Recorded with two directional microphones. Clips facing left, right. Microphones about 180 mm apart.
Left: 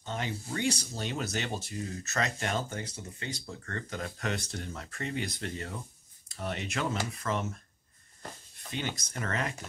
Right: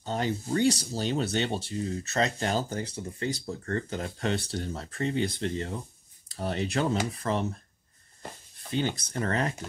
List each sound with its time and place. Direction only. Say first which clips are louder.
0.0 s speech: right 6 dB; 35° right (ahead or behind)